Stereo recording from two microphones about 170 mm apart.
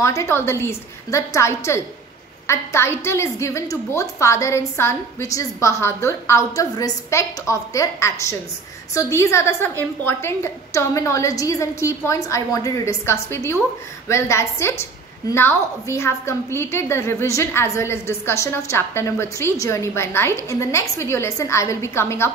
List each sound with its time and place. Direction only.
0.0 s a woman's voice: 15° left (ahead or behind)